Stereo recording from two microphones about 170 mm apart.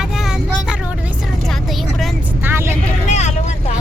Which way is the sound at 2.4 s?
15° right (ahead or behind).